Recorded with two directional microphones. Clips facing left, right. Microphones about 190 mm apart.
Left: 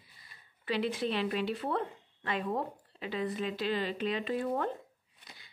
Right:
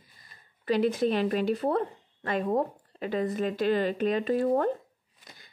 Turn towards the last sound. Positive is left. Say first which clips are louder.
# right 3 dB
turn(degrees=-45)  # may be behind; listen again after turning